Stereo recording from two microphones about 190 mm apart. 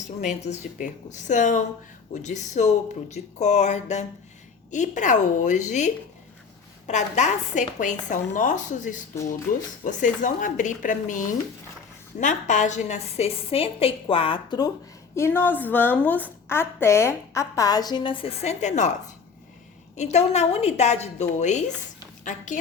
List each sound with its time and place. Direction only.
0.2 s a woman's voice: 40° left (ahead or behind)
15.1 s a woman's voice: 10° left (ahead or behind); by 18.9 s 35° left (ahead or behind)
20.0 s a woman's voice: 35° left (ahead or behind)